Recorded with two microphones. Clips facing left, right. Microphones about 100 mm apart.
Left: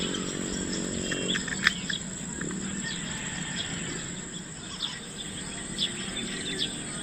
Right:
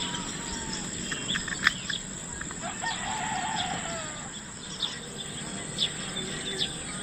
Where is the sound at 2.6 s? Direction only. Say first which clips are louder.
Right 3 dB; 55° right (ahead or behind).